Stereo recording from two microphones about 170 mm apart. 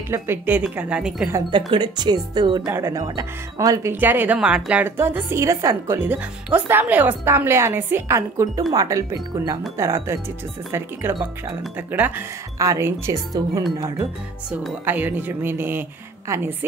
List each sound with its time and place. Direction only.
0.1 s speech: 10° right (ahead or behind)
1.7 s speech: 25° right (ahead or behind)
11.1 s speech: centre (ahead or behind); by 13.7 s 20° right (ahead or behind)
14.9 s speech: 10° right (ahead or behind)